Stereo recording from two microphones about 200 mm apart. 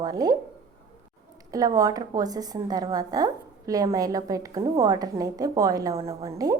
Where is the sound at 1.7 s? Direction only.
20° right (ahead or behind).